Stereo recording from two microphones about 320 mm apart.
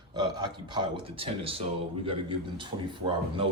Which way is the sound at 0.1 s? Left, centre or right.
Centre.